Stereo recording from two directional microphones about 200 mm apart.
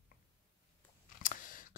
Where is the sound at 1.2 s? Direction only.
40° left (ahead or behind).